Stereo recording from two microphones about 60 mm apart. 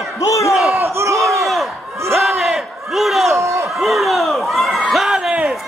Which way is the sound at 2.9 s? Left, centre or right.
Centre.